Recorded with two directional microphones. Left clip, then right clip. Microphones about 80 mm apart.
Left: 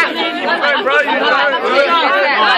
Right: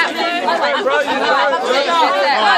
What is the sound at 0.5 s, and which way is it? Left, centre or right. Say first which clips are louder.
Chatter: left 3 dB; centre.